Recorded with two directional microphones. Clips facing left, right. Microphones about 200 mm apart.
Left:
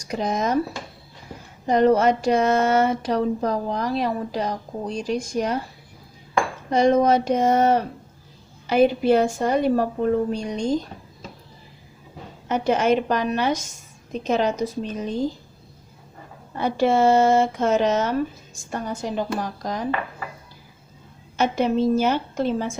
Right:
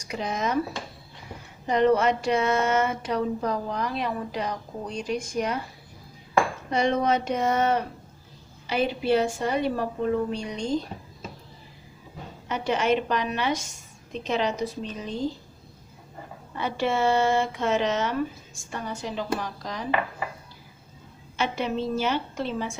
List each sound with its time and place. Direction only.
0.1 s speech: 40° left (ahead or behind)
1.6 s speech: 40° left (ahead or behind)
6.7 s a woman's voice: 40° left (ahead or behind)
12.5 s a woman's voice: 45° left (ahead or behind)
16.6 s a woman's voice: 40° left (ahead or behind)
21.3 s a woman's voice: 45° left (ahead or behind)